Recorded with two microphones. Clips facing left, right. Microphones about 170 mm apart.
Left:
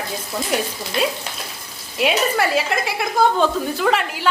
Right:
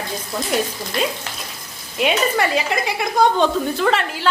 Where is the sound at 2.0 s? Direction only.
5° left (ahead or behind).